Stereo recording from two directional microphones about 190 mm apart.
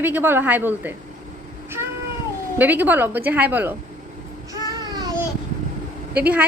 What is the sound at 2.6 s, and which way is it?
A woman's voice, 10° right (ahead or behind).